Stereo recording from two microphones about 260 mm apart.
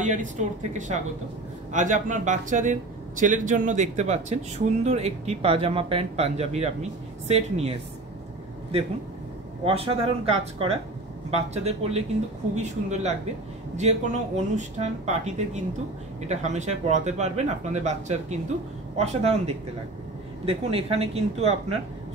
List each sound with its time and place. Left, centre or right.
0.0 s speech: right
9.7 s speech: right